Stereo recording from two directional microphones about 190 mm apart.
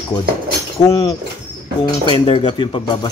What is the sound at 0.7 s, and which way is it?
Speech, 20° left (ahead or behind).